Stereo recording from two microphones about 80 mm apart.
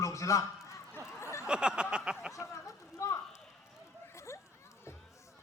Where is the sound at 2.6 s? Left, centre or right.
Left.